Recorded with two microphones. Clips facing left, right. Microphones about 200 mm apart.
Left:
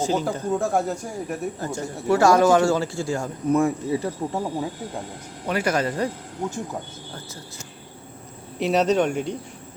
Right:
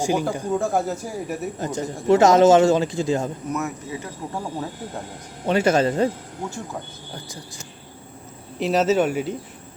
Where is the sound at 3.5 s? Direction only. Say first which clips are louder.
Left 7 dB; 30° left (ahead or behind).